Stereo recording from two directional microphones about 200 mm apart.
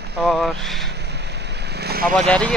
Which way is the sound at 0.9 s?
55° right (ahead or behind).